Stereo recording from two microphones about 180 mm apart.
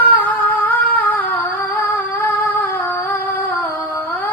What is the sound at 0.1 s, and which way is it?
Humming, 10° left (ahead or behind).